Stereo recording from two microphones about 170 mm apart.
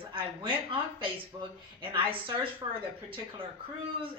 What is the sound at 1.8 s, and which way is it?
A woman's voice, 30° right (ahead or behind).